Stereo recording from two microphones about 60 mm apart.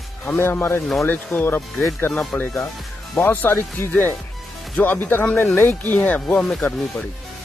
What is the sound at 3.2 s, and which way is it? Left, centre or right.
Speech, left.